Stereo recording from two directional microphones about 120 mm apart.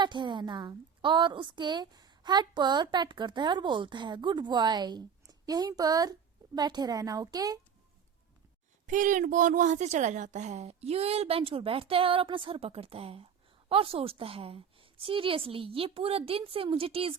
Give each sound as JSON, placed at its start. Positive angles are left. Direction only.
{"t": 0.0, "sound": "a woman's voice", "side_deg": -40}
{"t": 8.9, "sound": "a woman's voice", "side_deg": -90}